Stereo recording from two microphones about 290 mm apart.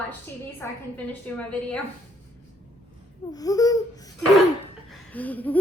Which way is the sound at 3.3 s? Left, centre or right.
Centre.